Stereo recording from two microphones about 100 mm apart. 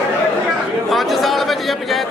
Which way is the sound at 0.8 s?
Centre (ahead or behind).